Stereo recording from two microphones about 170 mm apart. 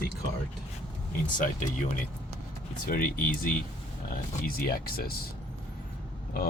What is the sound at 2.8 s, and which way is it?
Speech, 60° left (ahead or behind).